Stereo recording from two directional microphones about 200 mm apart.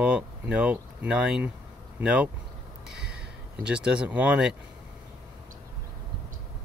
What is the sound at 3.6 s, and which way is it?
Speech, 5° right (ahead or behind).